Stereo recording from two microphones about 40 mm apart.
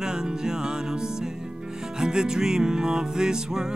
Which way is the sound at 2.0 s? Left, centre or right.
Centre.